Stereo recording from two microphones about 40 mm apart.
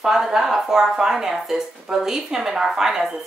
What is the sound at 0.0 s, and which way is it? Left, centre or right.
A woman's voice, centre.